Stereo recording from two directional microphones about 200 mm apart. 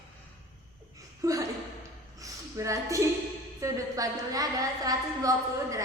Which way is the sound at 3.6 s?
15° right (ahead or behind).